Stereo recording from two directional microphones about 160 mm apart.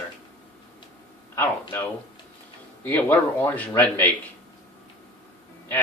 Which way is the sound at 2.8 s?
10° left (ahead or behind).